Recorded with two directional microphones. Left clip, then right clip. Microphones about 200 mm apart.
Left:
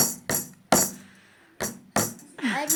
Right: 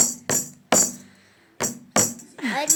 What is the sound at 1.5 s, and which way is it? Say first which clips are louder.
Music: right 4 dB; centre (ahead or behind).